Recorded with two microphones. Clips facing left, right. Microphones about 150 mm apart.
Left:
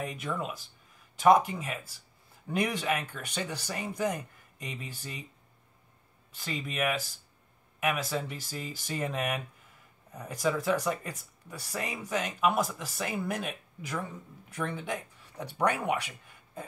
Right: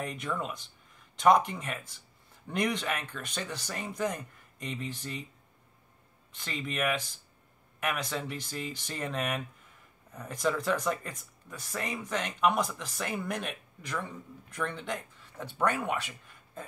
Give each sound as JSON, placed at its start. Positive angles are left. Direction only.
{"t": 0.0, "sound": "speech", "side_deg": 5}
{"t": 6.3, "sound": "speech", "side_deg": 5}